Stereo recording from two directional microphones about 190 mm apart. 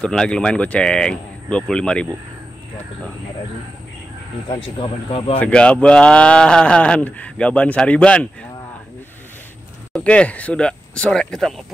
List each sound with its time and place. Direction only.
0.0 s speech: 5° left (ahead or behind)
4.7 s speech: 25° left (ahead or behind)
5.4 s speech: 5° left (ahead or behind)
9.9 s speech: 5° left (ahead or behind)